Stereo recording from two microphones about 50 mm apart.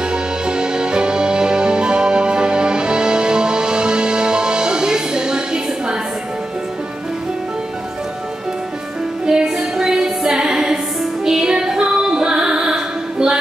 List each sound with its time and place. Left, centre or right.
0.0 s music: centre
9.2 s music: centre
11.2 s female singing: centre